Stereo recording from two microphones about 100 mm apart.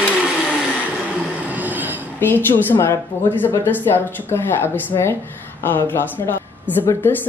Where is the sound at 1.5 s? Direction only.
15° right (ahead or behind).